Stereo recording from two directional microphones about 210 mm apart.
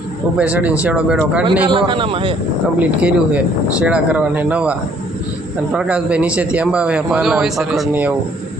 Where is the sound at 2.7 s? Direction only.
5° right (ahead or behind).